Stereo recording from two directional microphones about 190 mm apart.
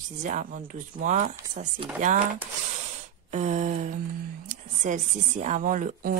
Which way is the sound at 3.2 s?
40° right (ahead or behind).